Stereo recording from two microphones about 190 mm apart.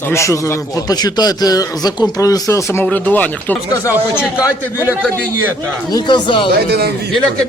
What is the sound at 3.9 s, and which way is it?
Speech, 5° right (ahead or behind).